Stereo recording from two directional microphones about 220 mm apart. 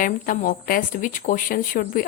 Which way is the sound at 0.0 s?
40° left (ahead or behind).